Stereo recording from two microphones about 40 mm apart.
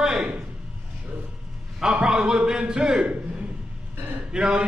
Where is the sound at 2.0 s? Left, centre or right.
Centre; by 3.4 s right.